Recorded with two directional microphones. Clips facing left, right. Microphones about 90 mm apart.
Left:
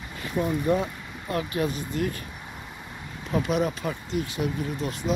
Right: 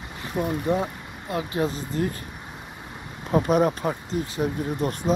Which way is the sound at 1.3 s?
25° right (ahead or behind).